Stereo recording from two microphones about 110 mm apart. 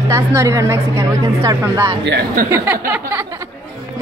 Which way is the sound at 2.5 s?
20° right (ahead or behind).